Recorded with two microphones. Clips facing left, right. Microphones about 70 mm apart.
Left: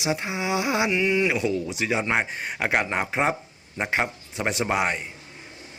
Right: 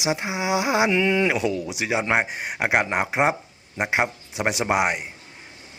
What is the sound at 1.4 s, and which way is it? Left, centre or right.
Speech, right.